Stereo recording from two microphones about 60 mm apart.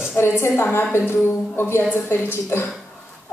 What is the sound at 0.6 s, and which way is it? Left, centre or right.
A woman's voice, left.